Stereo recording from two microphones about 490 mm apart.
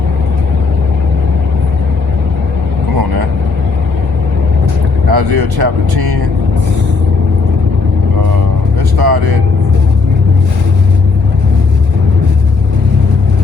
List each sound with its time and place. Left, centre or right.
5.1 s speech: right
9.0 s vehicle: right